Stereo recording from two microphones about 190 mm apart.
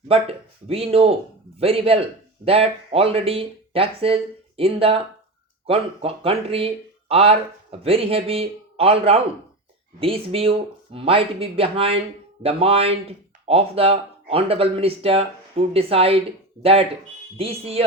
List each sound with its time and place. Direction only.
0.1 s a man's voice: 30° right (ahead or behind)
17.3 s speech: 30° right (ahead or behind)